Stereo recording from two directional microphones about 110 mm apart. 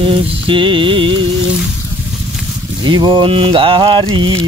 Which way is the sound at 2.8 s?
45° right (ahead or behind).